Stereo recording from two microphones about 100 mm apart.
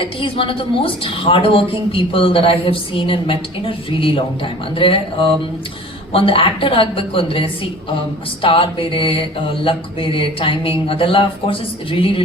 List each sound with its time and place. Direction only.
0.0 s a woman's voice: 60° left (ahead or behind)